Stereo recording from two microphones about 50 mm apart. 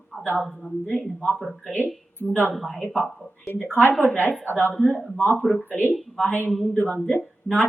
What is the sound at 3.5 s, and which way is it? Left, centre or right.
A woman's voice, left.